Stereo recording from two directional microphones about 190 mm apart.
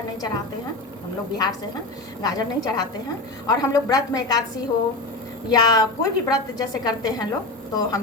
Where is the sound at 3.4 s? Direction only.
20° left (ahead or behind).